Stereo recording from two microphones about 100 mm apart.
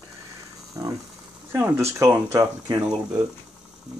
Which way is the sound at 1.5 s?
25° right (ahead or behind).